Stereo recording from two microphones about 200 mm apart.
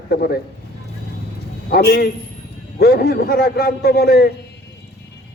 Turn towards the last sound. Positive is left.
turn(degrees=50)  # may be behind; listen again after turning